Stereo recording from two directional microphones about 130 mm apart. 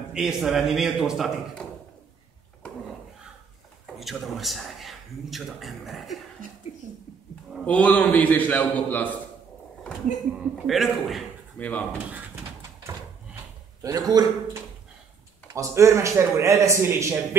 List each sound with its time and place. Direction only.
0.1 s speech: 5° right (ahead or behind)
3.8 s speech: centre (ahead or behind)
6.8 s a sound: 90° right
7.6 s a man's voice: 10° left (ahead or behind)
10.3 s speech: centre (ahead or behind)
11.5 s speech: 10° left (ahead or behind)
13.8 s a man's voice: 30° right (ahead or behind)